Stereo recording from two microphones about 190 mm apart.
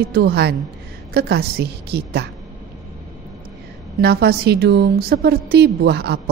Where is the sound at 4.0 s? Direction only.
55° right (ahead or behind).